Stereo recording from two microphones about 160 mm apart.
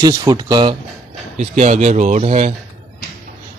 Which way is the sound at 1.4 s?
45° right (ahead or behind).